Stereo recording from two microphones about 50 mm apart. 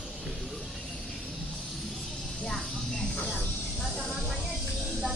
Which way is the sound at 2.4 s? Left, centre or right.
Centre.